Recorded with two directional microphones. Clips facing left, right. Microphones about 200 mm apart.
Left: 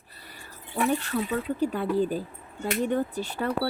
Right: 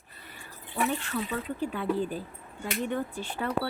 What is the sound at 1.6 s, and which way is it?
Speech, 40° left (ahead or behind).